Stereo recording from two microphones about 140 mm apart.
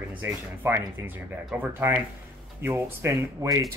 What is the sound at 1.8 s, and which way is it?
Speech, 15° right (ahead or behind).